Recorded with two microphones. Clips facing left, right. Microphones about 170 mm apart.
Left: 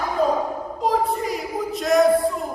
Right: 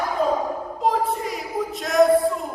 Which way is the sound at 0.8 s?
Centre (ahead or behind).